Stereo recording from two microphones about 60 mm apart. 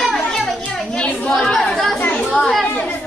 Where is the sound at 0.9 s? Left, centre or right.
Centre.